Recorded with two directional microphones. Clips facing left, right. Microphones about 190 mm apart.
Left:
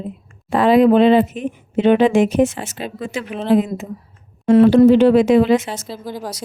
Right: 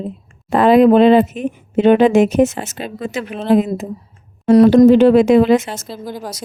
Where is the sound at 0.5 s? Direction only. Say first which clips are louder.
Right 2 dB; 50° right (ahead or behind).